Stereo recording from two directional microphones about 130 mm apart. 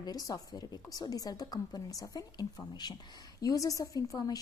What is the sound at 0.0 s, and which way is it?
A woman's voice, 30° left (ahead or behind).